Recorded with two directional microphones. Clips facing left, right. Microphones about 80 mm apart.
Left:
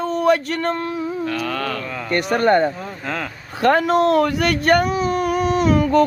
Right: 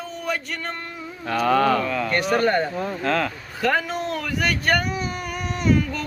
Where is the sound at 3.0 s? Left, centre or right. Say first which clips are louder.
Right 5 dB; centre.